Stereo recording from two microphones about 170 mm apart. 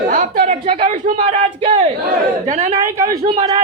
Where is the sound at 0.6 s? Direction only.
35° right (ahead or behind).